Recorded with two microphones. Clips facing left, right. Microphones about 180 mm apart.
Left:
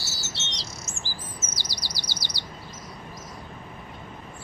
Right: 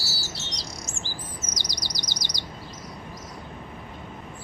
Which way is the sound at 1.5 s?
15° right (ahead or behind).